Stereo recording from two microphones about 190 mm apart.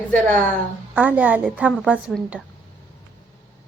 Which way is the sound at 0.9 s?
5° right (ahead or behind).